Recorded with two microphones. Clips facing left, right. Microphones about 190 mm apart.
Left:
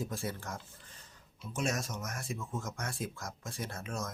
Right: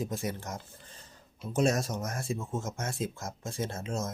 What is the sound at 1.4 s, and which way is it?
Speech, 35° right (ahead or behind).